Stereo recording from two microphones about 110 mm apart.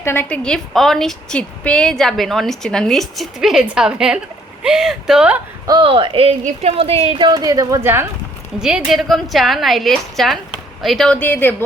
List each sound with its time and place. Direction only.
0.0 s a woman's voice: 20° left (ahead or behind)
0.3 s a woman's voice: 5° left (ahead or behind)
5.8 s speech: 55° right (ahead or behind)
7.2 s speech: 40° right (ahead or behind)
8.6 s a woman's voice: 5° right (ahead or behind); by 11.5 s 15° left (ahead or behind)